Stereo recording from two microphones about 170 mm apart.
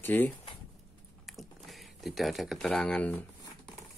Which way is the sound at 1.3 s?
Centre (ahead or behind).